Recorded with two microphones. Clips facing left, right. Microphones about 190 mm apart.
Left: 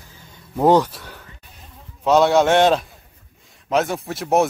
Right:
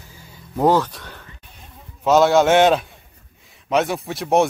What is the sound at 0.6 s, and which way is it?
A man's voice, 15° left (ahead or behind).